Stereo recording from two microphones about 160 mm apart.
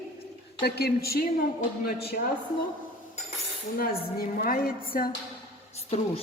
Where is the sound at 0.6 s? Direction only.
85° left; by 2.2 s 65° left (ahead or behind).